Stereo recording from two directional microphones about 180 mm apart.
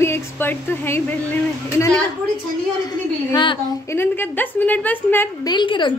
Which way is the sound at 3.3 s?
25° left (ahead or behind).